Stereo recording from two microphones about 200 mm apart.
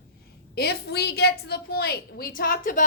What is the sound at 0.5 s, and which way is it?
A woman's voice, 55° left (ahead or behind).